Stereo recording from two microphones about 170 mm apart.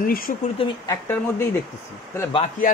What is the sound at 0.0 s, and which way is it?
Speech, 60° left (ahead or behind).